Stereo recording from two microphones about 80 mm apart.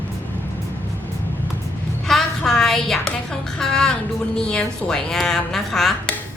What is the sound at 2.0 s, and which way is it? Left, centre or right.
Music, centre.